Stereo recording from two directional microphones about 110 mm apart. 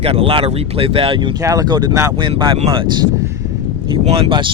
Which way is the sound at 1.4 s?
35° right (ahead or behind).